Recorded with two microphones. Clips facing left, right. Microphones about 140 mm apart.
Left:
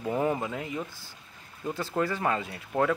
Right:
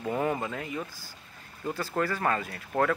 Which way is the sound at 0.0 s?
15° left (ahead or behind).